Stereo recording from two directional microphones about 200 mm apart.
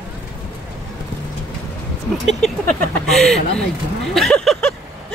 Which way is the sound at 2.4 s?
Centre (ahead or behind).